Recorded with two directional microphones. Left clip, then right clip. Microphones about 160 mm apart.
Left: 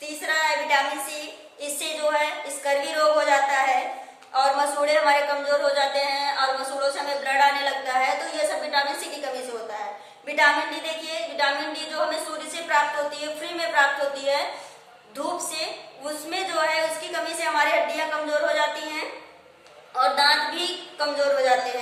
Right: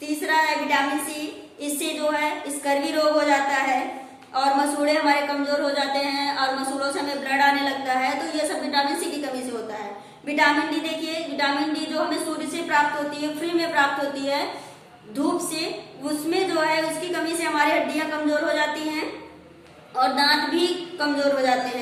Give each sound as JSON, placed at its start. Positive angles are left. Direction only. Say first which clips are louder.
{"t": 0.1, "sound": "a sound", "louder": "right 2 dB", "side_deg": 25}
{"t": 1.6, "sound": "a woman's voice", "louder": "right 1 dB", "side_deg": 20}
{"t": 16.0, "sound": "a woman's voice", "louder": "right 4 dB", "side_deg": 20}